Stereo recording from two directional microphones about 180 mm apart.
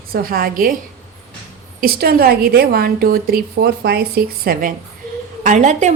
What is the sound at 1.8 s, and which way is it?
A woman's voice, 60° right (ahead or behind).